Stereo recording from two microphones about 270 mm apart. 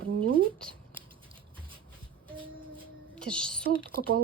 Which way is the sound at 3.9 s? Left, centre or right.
Right.